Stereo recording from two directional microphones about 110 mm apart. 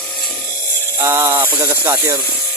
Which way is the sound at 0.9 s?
25° right (ahead or behind).